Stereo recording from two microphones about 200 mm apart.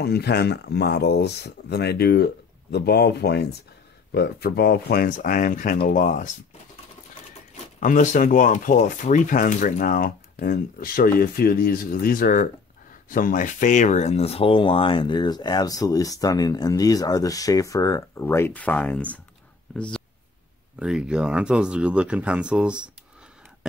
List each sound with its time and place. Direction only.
0.0 s speech: 55° left (ahead or behind)
7.8 s speech: 40° left (ahead or behind); by 19.2 s 5° left (ahead or behind)
20.8 s speech: 5° right (ahead or behind)